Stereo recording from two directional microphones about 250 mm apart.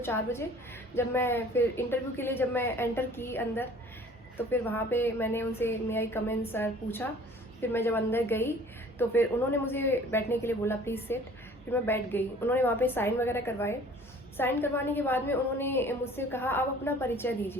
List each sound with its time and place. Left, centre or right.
0.0 s a woman's voice: centre